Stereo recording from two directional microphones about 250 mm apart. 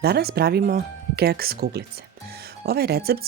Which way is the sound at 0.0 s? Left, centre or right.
Right.